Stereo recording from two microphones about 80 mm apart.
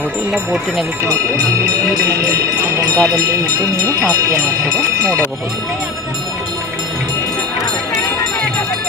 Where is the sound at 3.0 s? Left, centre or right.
Right.